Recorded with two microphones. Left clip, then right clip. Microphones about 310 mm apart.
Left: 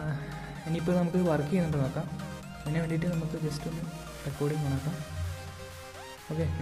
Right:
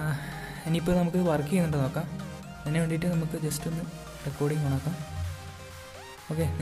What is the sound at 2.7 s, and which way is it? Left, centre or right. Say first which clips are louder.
Music: right 3 dB; centre.